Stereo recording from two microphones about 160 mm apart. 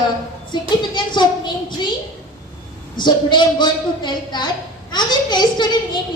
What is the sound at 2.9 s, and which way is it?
A woman's voice, 30° left (ahead or behind).